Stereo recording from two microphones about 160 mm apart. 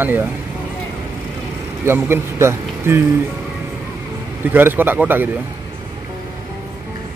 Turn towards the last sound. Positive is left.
turn(degrees=-10)  # may be behind; listen again after turning